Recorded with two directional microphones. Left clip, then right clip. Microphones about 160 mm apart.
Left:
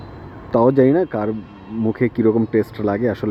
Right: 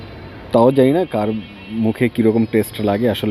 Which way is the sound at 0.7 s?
30° right (ahead or behind).